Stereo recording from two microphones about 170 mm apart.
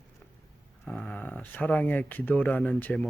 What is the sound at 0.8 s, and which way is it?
Speech, 5° left (ahead or behind).